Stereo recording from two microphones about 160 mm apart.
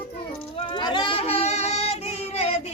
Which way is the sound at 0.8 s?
30° left (ahead or behind).